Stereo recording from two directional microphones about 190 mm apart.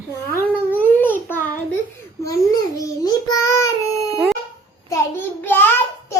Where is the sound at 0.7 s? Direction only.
10° left (ahead or behind).